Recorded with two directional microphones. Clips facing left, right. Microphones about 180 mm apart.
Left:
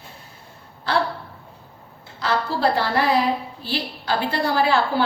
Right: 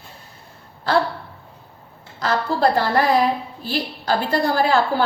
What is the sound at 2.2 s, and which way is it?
A woman's voice, 45° right (ahead or behind).